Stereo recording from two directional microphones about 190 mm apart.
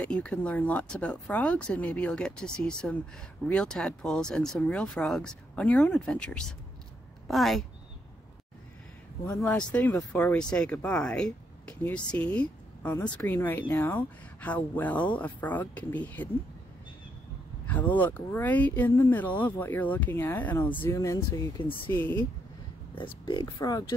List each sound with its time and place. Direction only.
0.0 s speech: 5° left (ahead or behind)
9.4 s speech: 5° left (ahead or behind)
17.6 s speech: 10° left (ahead or behind)
23.2 s speech: 20° left (ahead or behind)